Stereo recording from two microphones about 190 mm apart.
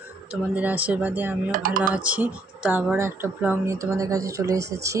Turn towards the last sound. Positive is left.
turn(degrees=-15)  # may be behind; listen again after turning